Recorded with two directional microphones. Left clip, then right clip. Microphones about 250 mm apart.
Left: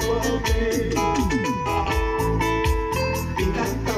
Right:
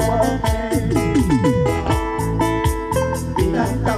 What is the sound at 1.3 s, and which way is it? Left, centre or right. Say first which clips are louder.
Music: right 5 dB; right.